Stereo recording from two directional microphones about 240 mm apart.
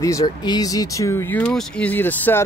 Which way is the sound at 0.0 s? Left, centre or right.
Centre.